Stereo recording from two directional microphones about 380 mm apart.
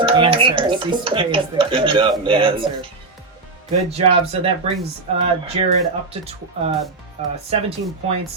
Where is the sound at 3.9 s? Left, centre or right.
Centre.